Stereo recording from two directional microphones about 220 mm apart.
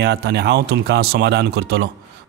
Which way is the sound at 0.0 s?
50° right (ahead or behind).